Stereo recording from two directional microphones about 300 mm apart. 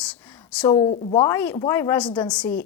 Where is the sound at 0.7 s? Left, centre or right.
Centre.